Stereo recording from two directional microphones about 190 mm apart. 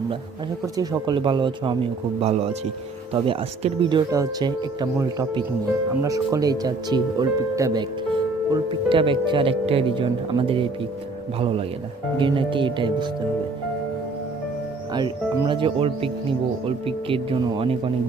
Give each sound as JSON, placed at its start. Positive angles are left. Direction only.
{"t": 0.6, "sound": "speech", "side_deg": -20}
{"t": 14.9, "sound": "speech", "side_deg": -25}